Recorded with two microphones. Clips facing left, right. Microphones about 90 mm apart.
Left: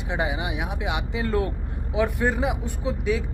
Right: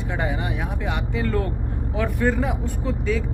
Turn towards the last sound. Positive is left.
turn(degrees=15)  # may be behind; listen again after turning